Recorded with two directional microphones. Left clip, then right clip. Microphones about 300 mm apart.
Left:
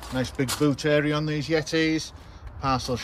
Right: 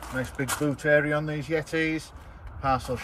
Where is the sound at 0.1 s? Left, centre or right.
Centre.